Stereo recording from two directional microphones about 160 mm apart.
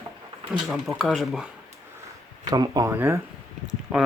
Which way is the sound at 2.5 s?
25° right (ahead or behind).